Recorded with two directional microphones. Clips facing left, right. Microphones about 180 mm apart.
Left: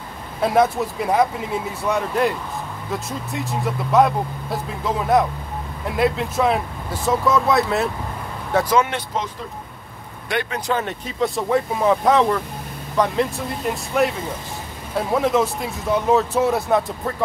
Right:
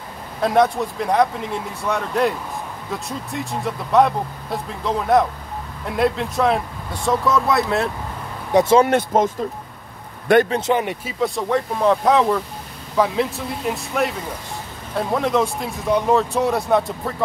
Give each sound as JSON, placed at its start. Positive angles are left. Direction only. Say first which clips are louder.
{"t": 0.4, "sound": "speech", "louder": "even", "side_deg": 5}
{"t": 8.5, "sound": "speech", "louder": "right 4 dB", "side_deg": -25}
{"t": 8.8, "sound": "speech", "louder": "right 9 dB", "side_deg": -50}
{"t": 10.3, "sound": "speech", "louder": "right 10 dB", "side_deg": -50}
{"t": 10.7, "sound": "speech", "louder": "right 3 dB", "side_deg": -15}
{"t": 11.1, "sound": "speech", "louder": "left 1 dB", "side_deg": 0}